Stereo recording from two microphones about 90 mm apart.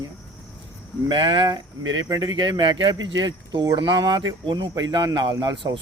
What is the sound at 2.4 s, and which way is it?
Speech, 60° right (ahead or behind).